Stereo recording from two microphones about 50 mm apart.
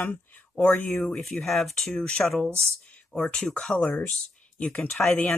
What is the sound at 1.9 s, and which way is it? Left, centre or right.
Speech, centre.